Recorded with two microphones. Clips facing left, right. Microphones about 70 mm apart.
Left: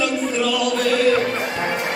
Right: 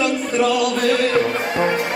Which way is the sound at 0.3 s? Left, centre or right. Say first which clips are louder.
Right 6 dB; right.